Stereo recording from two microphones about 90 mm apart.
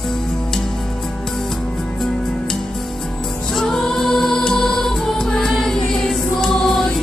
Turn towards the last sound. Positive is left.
turn(degrees=5)  # may be behind; listen again after turning